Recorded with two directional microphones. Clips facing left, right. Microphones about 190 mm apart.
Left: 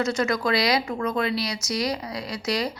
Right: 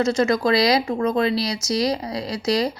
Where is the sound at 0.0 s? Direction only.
30° right (ahead or behind).